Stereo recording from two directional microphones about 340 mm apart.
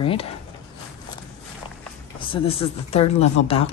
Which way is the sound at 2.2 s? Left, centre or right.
Centre.